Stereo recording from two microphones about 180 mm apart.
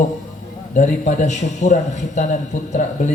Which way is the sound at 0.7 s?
45° left (ahead or behind).